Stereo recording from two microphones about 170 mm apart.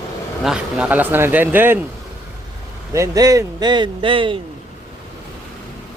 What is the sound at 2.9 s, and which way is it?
Speech, 20° right (ahead or behind).